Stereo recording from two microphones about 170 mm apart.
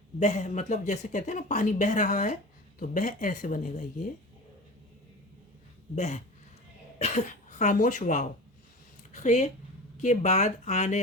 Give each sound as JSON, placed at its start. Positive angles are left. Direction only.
{"t": 0.2, "sound": "speech", "side_deg": 45}
{"t": 6.0, "sound": "speech", "side_deg": 45}